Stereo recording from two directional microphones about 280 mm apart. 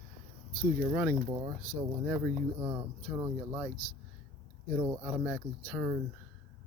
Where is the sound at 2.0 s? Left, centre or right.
Centre.